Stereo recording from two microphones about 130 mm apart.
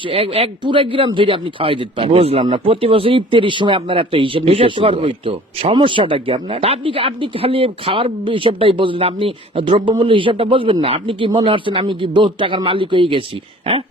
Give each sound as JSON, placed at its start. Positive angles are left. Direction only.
{"t": 0.0, "sound": "speech", "side_deg": -45}